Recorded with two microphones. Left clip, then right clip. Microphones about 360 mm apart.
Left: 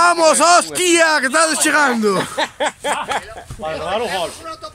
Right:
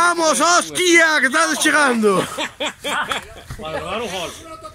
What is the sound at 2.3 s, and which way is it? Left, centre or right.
Snicker, left.